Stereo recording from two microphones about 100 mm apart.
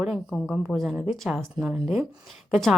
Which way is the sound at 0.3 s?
Centre (ahead or behind).